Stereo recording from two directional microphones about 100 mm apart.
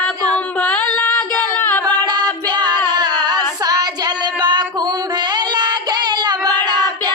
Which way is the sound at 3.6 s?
40° right (ahead or behind).